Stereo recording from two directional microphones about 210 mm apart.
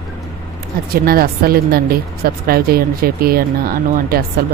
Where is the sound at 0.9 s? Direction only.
45° right (ahead or behind).